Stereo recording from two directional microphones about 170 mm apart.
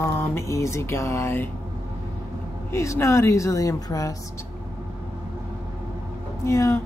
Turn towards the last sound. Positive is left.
turn(degrees=15)  # may be behind; listen again after turning